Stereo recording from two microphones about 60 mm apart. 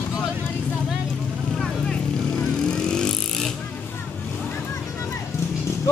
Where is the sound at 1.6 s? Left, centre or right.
Centre.